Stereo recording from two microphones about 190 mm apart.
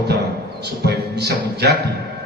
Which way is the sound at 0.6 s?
60° right (ahead or behind).